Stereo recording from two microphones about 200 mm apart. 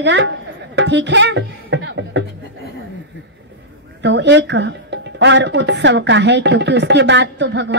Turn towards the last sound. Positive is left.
turn(degrees=-60)  # may be behind; listen again after turning